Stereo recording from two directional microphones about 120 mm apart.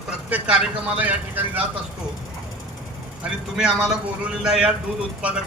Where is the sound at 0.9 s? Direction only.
15° right (ahead or behind).